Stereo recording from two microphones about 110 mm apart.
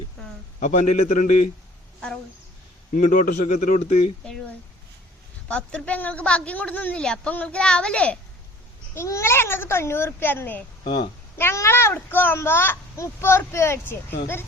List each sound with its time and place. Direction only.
0.6 s a man's voice: 90° left
3.3 s a man's voice: 90° left
5.5 s a woman's voice: 10° left (ahead or behind)
9.0 s a child's voice: 25° left (ahead or behind)
10.8 s a woman's voice: 45° left (ahead or behind)
11.3 s a child's voice: 25° left (ahead or behind)